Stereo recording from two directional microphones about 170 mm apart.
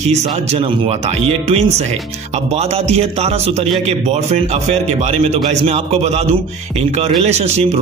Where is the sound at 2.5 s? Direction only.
40° right (ahead or behind).